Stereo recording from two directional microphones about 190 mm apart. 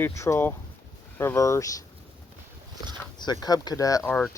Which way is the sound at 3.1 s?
20° left (ahead or behind).